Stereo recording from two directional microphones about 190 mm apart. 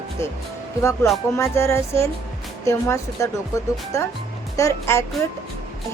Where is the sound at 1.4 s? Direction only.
15° left (ahead or behind).